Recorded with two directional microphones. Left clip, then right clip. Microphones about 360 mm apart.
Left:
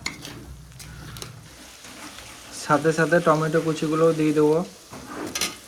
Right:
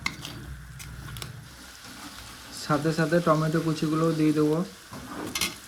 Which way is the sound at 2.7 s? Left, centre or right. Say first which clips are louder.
Left 6 dB; left.